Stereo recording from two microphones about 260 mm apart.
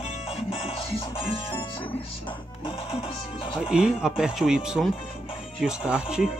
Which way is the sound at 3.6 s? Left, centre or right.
Centre.